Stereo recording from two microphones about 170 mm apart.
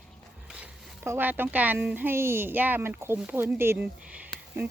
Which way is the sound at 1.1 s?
10° right (ahead or behind).